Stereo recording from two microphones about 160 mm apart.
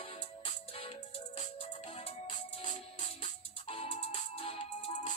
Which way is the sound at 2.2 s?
45° left (ahead or behind).